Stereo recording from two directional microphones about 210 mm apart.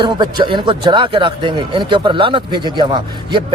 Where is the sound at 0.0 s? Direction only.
20° right (ahead or behind).